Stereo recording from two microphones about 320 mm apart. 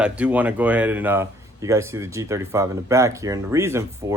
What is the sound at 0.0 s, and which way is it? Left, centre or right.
Speech, centre.